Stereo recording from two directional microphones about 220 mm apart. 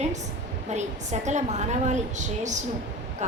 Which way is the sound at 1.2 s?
30° right (ahead or behind).